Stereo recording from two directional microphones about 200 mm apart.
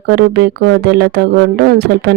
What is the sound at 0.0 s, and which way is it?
Speech, 55° right (ahead or behind).